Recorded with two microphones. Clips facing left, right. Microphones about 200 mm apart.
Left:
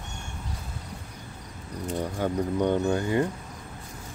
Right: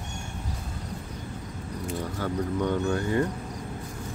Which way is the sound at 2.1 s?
20° left (ahead or behind).